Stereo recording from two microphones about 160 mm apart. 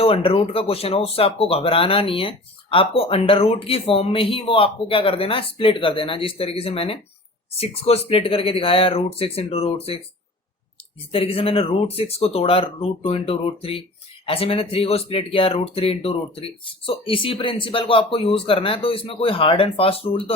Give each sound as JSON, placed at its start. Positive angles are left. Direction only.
{"t": 0.0, "sound": "speech", "side_deg": 35}
{"t": 11.1, "sound": "speech", "side_deg": 35}